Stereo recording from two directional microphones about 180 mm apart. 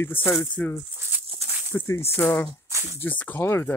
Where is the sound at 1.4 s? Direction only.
35° right (ahead or behind).